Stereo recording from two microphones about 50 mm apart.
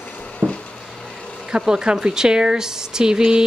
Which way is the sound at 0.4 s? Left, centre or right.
Right.